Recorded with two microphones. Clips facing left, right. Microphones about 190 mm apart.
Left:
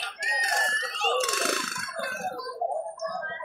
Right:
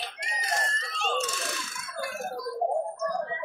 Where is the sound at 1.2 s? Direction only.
70° left (ahead or behind).